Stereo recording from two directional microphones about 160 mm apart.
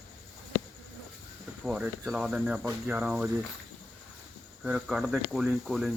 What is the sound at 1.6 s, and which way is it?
Speech, 5° right (ahead or behind).